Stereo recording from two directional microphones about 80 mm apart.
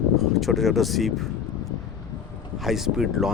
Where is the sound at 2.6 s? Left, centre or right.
Centre.